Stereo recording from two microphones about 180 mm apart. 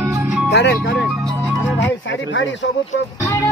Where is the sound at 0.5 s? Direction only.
75° left (ahead or behind).